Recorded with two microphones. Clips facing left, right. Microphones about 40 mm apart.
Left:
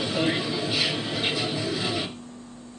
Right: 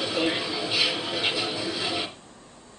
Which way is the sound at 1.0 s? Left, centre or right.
Centre.